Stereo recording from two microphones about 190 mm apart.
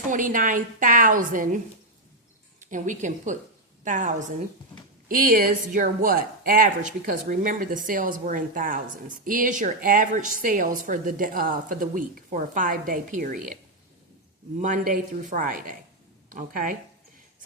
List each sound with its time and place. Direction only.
0.1 s speech: 45° right (ahead or behind)
2.6 s a woman's voice: 40° right (ahead or behind)
14.6 s speech: 45° right (ahead or behind)